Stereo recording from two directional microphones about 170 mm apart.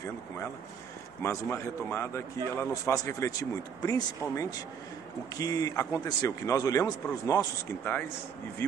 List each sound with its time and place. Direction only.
1.2 s a man's voice: 15° left (ahead or behind)